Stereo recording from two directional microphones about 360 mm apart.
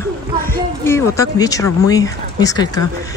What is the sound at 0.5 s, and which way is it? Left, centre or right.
Speech, centre.